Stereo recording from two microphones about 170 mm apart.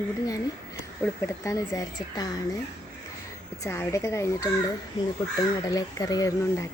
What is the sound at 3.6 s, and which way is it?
Speech, 15° left (ahead or behind).